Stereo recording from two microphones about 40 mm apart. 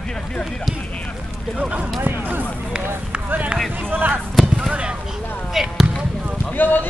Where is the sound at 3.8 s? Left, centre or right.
Right.